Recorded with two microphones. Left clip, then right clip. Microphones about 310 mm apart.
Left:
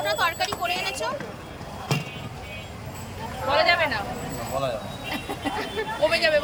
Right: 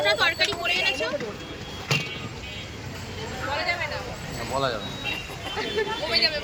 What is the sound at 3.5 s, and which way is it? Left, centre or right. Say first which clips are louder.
Speech: left 8 dB; left.